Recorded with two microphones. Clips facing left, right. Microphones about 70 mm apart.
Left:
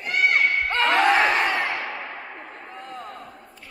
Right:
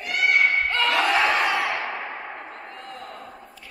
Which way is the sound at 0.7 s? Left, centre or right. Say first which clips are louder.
Left 3 dB; left.